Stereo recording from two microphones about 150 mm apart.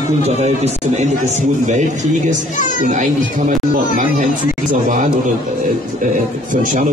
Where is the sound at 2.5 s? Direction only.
60° left (ahead or behind).